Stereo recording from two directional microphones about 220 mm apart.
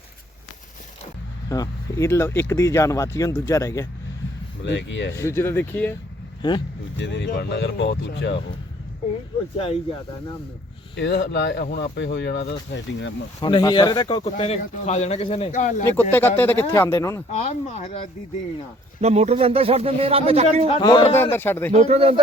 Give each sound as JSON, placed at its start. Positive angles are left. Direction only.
{"t": 1.5, "sound": "speech", "side_deg": 15}
{"t": 4.6, "sound": "speech", "side_deg": 55}
{"t": 5.1, "sound": "speech", "side_deg": 10}
{"t": 6.4, "sound": "a man's voice", "side_deg": 20}
{"t": 7.0, "sound": "speech", "side_deg": 50}
{"t": 10.9, "sound": "speech", "side_deg": 55}
{"t": 13.4, "sound": "a man's voice", "side_deg": 20}
{"t": 16.0, "sound": "speech", "side_deg": 10}
{"t": 17.3, "sound": "speech", "side_deg": 30}
{"t": 19.0, "sound": "speech", "side_deg": -30}
{"t": 20.7, "sound": "a man's voice", "side_deg": 25}
{"t": 21.2, "sound": "speech", "side_deg": 10}
{"t": 21.7, "sound": "speech", "side_deg": -30}